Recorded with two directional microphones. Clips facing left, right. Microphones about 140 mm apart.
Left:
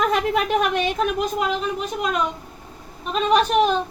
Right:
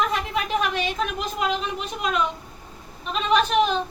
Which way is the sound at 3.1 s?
45° left (ahead or behind).